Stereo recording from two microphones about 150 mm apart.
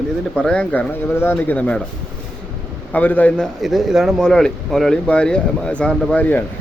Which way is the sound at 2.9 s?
10° left (ahead or behind).